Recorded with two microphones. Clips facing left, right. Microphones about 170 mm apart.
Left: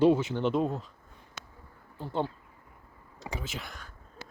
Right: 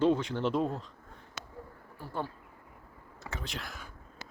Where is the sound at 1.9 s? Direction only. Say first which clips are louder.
Left 5 dB; 20° left (ahead or behind).